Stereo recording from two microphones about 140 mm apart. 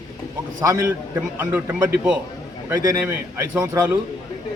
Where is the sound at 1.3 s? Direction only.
15° right (ahead or behind).